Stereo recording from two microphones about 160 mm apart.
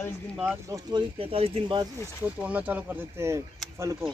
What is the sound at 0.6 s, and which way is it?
Speech, 20° right (ahead or behind).